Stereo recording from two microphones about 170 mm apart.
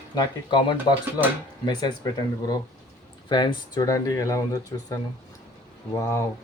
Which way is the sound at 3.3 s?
25° left (ahead or behind).